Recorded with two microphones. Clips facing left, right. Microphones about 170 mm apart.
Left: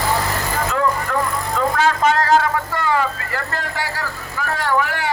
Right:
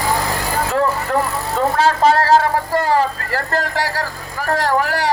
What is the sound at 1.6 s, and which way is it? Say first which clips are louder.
Speech: right 3 dB; 30° right (ahead or behind).